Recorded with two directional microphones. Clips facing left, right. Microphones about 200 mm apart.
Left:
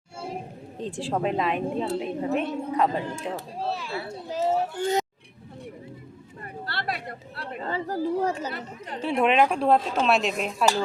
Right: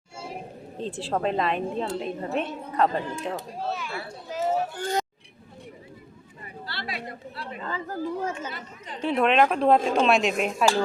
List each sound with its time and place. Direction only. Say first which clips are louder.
0.8 s a woman's voice: even; 15° left (ahead or behind)
3.6 s speech: left 1 dB; 30° left (ahead or behind)
6.4 s speech: left 4 dB; 55° left (ahead or behind)
7.6 s speech: left 4 dB; 30° left (ahead or behind)
9.0 s a woman's voice: even; 10° left (ahead or behind)